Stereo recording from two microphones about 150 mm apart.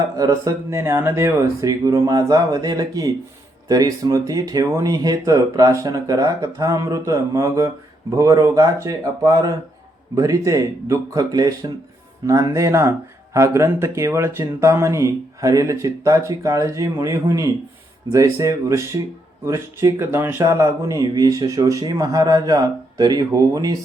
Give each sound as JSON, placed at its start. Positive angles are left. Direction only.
{"t": 0.2, "sound": "speech", "side_deg": -25}